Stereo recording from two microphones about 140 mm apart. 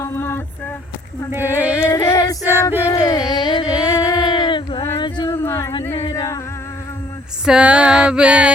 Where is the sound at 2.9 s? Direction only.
25° left (ahead or behind).